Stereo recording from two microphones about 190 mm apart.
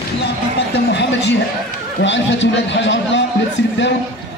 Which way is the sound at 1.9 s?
70° left (ahead or behind).